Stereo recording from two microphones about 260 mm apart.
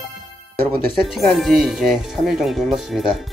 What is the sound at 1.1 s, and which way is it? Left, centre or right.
Speech, centre.